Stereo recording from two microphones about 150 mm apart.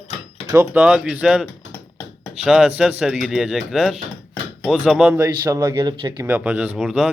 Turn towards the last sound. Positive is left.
turn(degrees=-5)  # may be behind; listen again after turning